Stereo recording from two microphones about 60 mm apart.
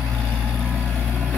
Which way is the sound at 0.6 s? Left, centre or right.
Right.